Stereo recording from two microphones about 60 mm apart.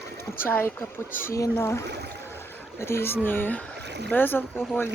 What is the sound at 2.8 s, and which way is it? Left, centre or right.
Speech, left.